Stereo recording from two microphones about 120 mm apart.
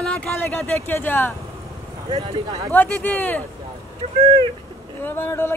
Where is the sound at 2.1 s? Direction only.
40° right (ahead or behind).